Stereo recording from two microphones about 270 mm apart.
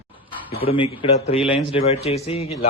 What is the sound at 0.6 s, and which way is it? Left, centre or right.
Speech, centre.